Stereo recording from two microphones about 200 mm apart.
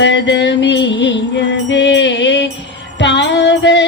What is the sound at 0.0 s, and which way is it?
Music, 65° left (ahead or behind).